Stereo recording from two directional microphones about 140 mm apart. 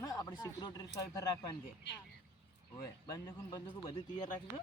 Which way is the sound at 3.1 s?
25° left (ahead or behind).